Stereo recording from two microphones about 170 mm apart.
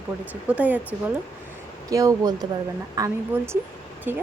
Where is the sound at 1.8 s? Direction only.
20° right (ahead or behind).